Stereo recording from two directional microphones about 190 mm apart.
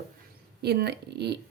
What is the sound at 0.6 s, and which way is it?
Speech, 60° right (ahead or behind).